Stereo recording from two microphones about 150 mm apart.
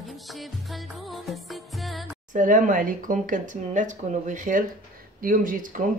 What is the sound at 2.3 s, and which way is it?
Speech, 60° right (ahead or behind).